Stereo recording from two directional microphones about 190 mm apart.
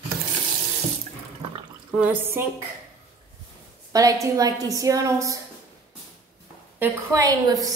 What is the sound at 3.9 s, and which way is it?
A woman's voice, 15° right (ahead or behind).